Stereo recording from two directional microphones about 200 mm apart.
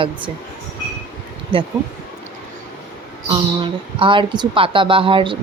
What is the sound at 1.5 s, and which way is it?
Speech, 25° right (ahead or behind).